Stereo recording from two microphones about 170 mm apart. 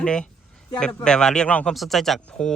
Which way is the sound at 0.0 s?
5° left (ahead or behind).